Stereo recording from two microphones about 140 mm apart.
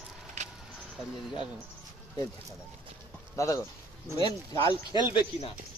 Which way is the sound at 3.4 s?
20° left (ahead or behind).